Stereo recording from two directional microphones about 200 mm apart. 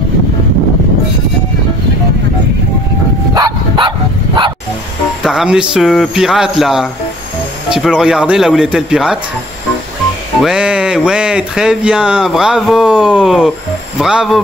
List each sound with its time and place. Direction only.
3.3 s dog: 20° right (ahead or behind)
5.2 s speech: 5° right (ahead or behind)
10.4 s speech: 5° right (ahead or behind)